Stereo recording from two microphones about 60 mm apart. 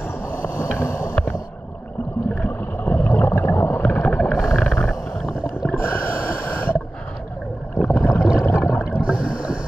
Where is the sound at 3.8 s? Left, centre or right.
Left.